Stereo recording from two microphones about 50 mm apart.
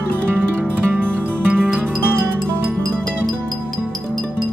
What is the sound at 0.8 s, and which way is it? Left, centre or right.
Music, right.